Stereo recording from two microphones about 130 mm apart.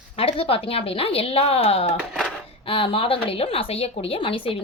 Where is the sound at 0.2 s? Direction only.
45° left (ahead or behind).